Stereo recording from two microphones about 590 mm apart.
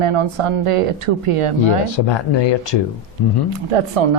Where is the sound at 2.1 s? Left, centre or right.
Left.